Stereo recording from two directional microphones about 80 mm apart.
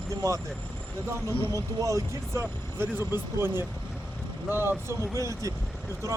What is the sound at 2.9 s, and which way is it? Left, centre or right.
Speech, right.